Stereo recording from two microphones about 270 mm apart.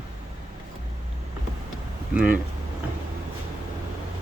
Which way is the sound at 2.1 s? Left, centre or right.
Centre.